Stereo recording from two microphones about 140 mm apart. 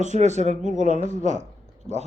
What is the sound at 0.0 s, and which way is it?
Speech, 55° right (ahead or behind).